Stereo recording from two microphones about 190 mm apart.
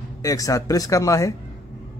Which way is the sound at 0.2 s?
20° left (ahead or behind).